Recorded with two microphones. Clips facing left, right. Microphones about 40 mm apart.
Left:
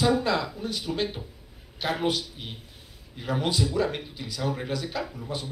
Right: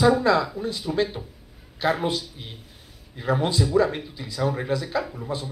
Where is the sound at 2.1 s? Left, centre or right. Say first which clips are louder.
Even; left.